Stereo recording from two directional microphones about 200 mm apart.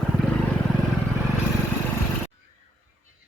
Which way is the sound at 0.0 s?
Centre (ahead or behind).